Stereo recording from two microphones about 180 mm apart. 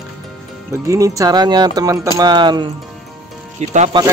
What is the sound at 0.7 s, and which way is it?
Speech, 15° right (ahead or behind).